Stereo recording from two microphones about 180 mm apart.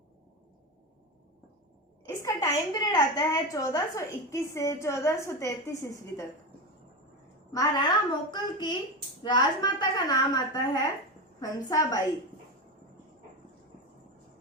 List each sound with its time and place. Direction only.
2.0 s a woman's voice: 20° left (ahead or behind)
7.5 s a woman's voice: 20° left (ahead or behind)